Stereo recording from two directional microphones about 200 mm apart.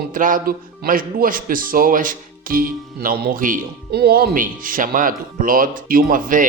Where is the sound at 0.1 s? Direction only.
40° right (ahead or behind).